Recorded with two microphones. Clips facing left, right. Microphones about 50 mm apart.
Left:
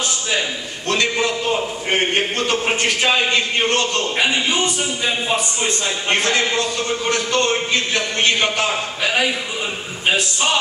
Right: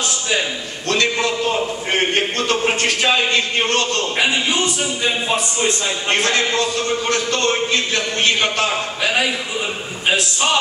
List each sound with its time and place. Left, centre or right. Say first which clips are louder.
1.9 s speech: left 1 dB; centre
4.2 s speech: even; centre
8.6 s speech: right 1 dB; centre